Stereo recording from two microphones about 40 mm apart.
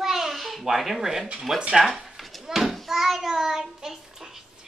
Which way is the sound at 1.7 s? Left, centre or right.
Centre.